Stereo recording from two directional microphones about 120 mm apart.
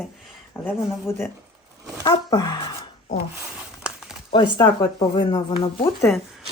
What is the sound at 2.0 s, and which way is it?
Speech, 35° left (ahead or behind).